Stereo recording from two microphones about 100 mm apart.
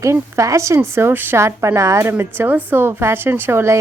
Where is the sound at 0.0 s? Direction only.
30° right (ahead or behind).